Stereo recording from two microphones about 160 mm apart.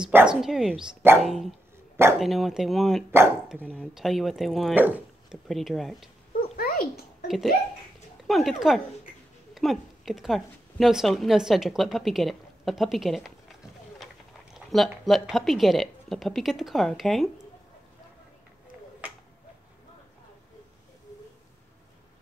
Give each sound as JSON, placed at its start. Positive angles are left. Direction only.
{"t": 0.0, "sound": "a woman's voice", "side_deg": -5}
{"t": 4.7, "sound": "a woman's voice", "side_deg": -10}
{"t": 6.5, "sound": "dog", "side_deg": 65}
{"t": 7.2, "sound": "a woman's voice", "side_deg": 0}